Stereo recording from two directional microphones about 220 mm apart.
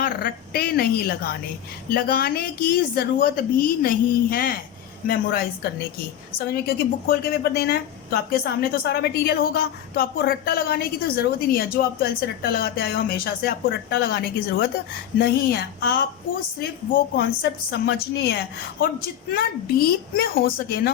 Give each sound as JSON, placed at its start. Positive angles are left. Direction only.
{"t": 0.0, "sound": "a woman's voice", "side_deg": 45}
{"t": 6.5, "sound": "a woman's voice", "side_deg": 45}